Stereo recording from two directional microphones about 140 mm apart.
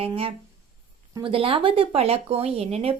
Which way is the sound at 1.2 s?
40° right (ahead or behind).